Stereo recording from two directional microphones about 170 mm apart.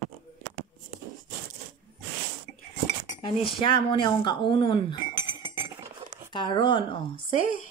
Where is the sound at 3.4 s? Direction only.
30° left (ahead or behind).